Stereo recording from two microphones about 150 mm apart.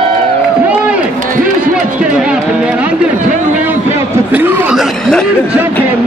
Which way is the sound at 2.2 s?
5° right (ahead or behind).